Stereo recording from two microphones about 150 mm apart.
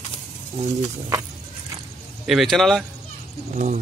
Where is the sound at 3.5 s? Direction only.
55° right (ahead or behind).